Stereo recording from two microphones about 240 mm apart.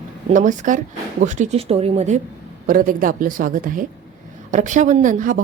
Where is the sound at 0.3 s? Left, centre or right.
Right.